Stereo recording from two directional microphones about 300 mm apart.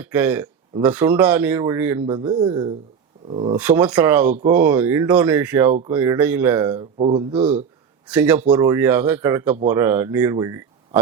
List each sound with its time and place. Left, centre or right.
0.0 s speech: centre
3.6 s speech: centre
8.1 s speech: centre